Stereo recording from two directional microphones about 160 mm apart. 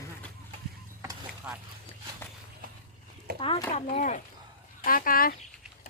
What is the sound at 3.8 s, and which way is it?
Speech, 50° left (ahead or behind).